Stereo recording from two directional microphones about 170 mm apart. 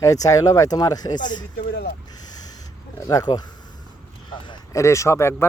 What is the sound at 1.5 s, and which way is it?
Speech, 70° left (ahead or behind).